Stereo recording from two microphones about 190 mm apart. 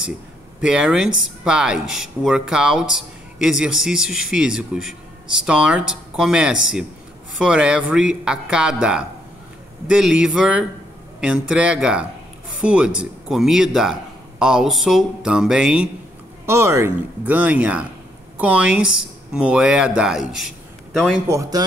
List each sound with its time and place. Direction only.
0.6 s a man's voice: 5° right (ahead or behind)
21.3 s speech: 20° right (ahead or behind)